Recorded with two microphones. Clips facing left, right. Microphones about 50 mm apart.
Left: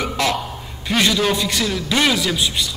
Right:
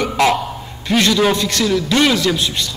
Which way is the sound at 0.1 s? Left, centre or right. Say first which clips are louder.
Right 8 dB; centre.